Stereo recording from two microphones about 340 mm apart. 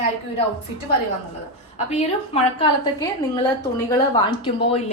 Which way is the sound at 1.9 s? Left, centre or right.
Centre.